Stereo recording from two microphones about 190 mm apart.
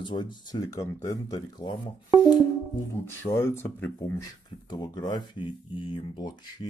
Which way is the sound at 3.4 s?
10° left (ahead or behind).